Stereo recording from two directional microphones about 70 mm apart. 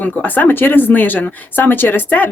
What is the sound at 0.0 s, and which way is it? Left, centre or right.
Speech, left.